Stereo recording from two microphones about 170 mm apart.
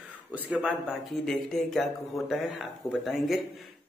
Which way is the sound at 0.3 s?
5° right (ahead or behind).